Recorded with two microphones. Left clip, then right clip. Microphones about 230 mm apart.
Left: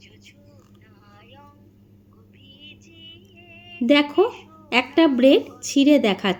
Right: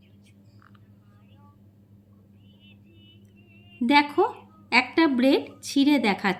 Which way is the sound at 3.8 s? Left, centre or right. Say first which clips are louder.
Left 3 dB; centre.